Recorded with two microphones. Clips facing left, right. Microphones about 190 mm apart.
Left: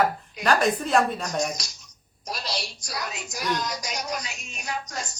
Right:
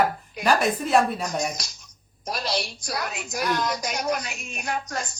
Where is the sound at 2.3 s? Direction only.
55° right (ahead or behind).